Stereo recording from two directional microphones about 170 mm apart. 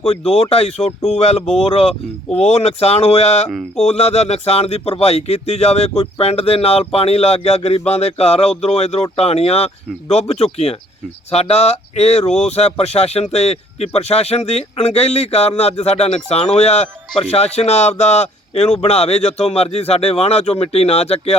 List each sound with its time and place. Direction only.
0.1 s speech: 35° left (ahead or behind)
3.5 s a sound: centre (ahead or behind)
3.8 s speech: 40° left (ahead or behind)